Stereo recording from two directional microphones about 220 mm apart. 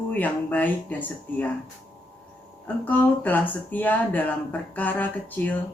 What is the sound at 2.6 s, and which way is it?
Speech, 10° left (ahead or behind).